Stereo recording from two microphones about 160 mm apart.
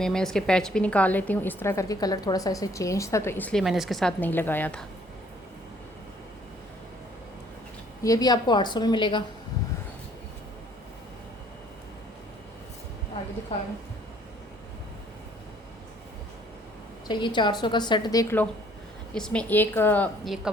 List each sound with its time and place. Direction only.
0.0 s a woman's voice: 5° left (ahead or behind)
3.6 s speech: centre (ahead or behind)
4.2 s a woman's voice: 15° left (ahead or behind)
8.0 s a woman's voice: 25° left (ahead or behind)
17.1 s a woman's voice: 30° left (ahead or behind)
19.1 s a woman's voice: 5° left (ahead or behind)
20.2 s speech: centre (ahead or behind)